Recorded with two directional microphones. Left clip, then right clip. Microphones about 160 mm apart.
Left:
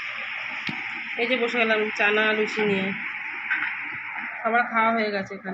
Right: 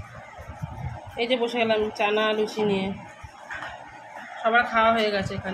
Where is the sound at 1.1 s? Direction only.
15° right (ahead or behind).